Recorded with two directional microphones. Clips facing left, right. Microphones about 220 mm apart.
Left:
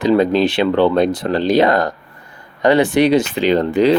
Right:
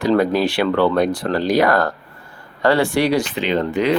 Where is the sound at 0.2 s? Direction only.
20° left (ahead or behind).